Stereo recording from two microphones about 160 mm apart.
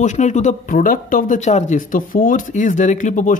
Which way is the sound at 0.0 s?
45° left (ahead or behind).